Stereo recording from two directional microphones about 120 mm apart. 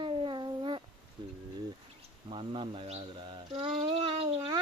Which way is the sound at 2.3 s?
45° right (ahead or behind).